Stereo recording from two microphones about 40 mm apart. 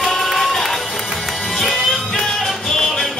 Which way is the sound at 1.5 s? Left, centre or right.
Centre.